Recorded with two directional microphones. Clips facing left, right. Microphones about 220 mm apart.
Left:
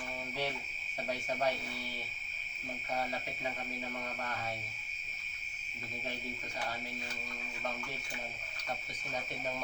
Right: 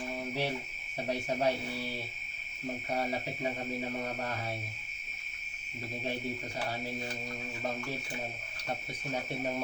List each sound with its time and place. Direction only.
1.0 s speech: 30° right (ahead or behind)